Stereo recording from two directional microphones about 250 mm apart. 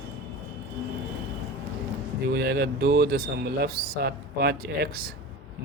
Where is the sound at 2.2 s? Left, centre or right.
Right.